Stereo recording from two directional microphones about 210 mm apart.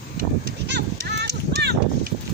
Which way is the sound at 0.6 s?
55° right (ahead or behind).